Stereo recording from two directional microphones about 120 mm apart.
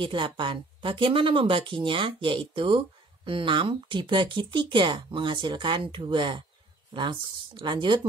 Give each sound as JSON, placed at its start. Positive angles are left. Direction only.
{"t": 0.0, "sound": "speech", "side_deg": -45}